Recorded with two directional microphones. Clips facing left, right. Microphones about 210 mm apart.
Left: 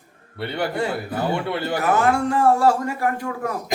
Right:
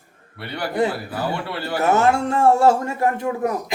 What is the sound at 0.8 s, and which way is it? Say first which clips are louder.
Speech: right 7 dB; 20° right (ahead or behind).